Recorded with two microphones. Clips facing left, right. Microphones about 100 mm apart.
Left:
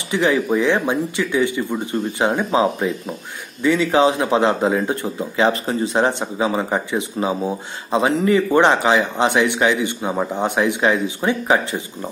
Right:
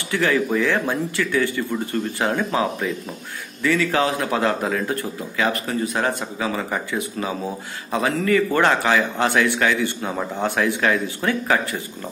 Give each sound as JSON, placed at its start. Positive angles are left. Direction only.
{"t": 0.1, "sound": "speech", "side_deg": 20}